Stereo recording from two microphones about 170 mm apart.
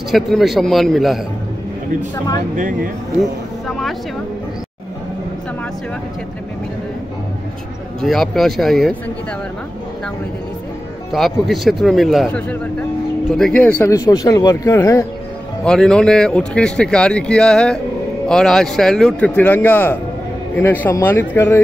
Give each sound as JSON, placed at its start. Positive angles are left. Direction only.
{"t": 0.1, "sound": "speech", "side_deg": 0}
{"t": 2.5, "sound": "speech", "side_deg": -50}
{"t": 3.2, "sound": "speech", "side_deg": 0}
{"t": 8.0, "sound": "speech", "side_deg": 0}
{"t": 11.1, "sound": "speech", "side_deg": 0}
{"t": 15.6, "sound": "speech", "side_deg": 5}